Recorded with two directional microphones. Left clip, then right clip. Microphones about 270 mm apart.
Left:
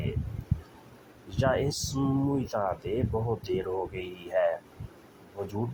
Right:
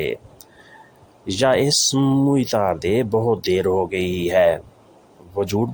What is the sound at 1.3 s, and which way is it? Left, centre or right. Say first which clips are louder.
Speech: right 11 dB; right.